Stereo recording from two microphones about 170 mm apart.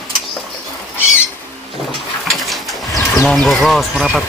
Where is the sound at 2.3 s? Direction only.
Centre (ahead or behind).